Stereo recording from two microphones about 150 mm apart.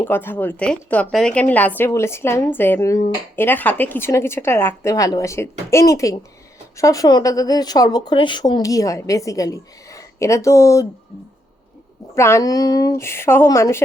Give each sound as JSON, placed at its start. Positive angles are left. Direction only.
{"t": 0.0, "sound": "a woman's voice", "side_deg": 15}
{"t": 12.1, "sound": "a woman's voice", "side_deg": 20}